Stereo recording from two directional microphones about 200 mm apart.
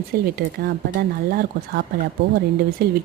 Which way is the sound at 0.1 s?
50° right (ahead or behind).